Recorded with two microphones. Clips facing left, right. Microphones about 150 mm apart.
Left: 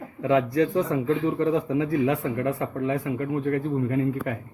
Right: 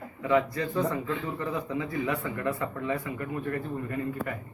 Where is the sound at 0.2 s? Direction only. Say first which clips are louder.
Left 5 dB; 75° left (ahead or behind); by 1.1 s 90° left.